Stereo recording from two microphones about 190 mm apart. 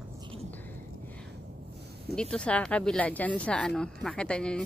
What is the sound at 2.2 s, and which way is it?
Speech, 5° left (ahead or behind).